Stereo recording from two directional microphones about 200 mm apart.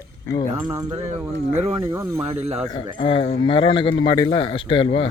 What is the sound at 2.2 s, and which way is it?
Speech, 30° right (ahead or behind).